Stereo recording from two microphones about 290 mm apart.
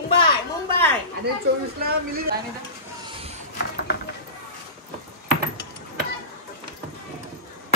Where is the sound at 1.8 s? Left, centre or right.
Right.